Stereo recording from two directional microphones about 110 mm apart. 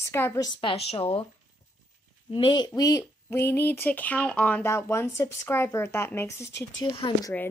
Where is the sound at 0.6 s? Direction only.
60° left (ahead or behind).